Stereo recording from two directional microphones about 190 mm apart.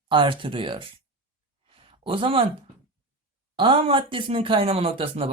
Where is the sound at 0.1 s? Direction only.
25° right (ahead or behind).